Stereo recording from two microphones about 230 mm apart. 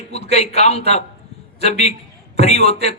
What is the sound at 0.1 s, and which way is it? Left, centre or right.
Speech, left.